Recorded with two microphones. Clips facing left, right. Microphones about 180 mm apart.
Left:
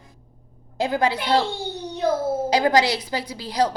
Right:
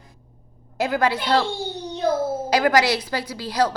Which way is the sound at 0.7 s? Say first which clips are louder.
Even; 15° left (ahead or behind).